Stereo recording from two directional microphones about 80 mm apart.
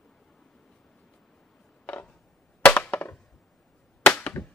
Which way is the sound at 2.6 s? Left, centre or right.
Centre.